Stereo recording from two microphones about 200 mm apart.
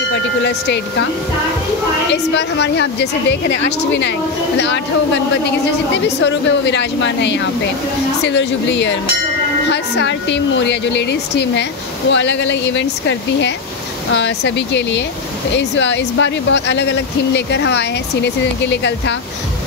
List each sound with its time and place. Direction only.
0.1 s speech: 55° left (ahead or behind)
2.3 s speech: 60° left (ahead or behind)
6.0 s speech: 60° left (ahead or behind)